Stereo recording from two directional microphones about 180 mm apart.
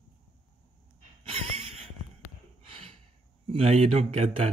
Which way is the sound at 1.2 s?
35° right (ahead or behind).